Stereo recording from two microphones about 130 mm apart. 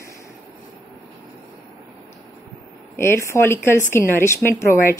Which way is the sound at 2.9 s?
20° left (ahead or behind).